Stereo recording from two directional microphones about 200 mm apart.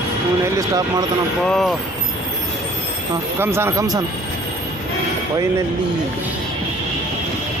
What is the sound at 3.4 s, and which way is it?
Speech, 10° right (ahead or behind).